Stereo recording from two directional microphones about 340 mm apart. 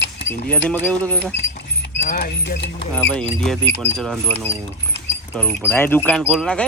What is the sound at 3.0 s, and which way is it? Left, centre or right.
Speech, centre.